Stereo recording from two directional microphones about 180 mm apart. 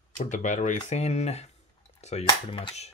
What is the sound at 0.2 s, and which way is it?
Speech, 45° left (ahead or behind).